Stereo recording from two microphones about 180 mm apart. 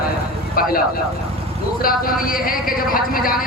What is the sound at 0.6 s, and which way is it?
Speech, 55° left (ahead or behind).